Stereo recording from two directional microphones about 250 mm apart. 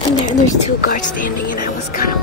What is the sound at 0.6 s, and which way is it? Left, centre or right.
Speech, left.